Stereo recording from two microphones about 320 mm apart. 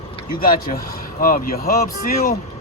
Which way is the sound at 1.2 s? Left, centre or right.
Left.